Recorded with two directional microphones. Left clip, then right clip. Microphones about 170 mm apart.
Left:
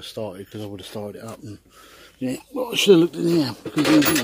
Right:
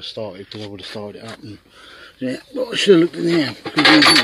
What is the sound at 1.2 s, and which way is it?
A man's voice, 5° left (ahead or behind).